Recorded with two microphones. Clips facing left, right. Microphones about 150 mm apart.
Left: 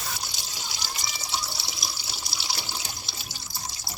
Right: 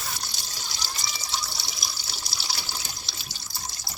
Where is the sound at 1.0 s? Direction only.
20° left (ahead or behind).